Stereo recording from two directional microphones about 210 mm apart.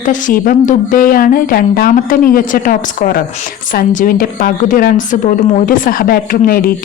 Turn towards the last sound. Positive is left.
turn(degrees=45)  # may be behind; listen again after turning